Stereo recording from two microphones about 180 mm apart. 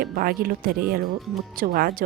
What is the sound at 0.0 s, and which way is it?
A woman's voice, 55° right (ahead or behind).